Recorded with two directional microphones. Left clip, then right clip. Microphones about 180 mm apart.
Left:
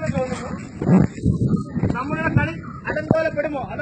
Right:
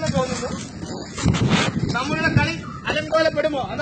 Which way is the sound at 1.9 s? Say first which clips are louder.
Right 1 dB; 45° right (ahead or behind).